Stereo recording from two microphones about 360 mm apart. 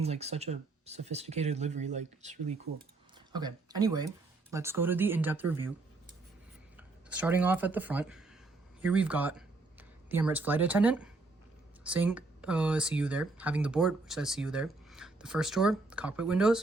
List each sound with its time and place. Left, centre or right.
0.0 s speech: centre
6.7 s speech: centre